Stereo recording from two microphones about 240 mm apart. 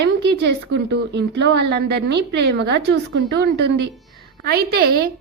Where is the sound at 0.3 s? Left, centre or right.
Right.